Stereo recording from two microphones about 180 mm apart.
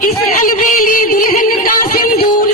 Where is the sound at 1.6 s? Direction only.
50° left (ahead or behind).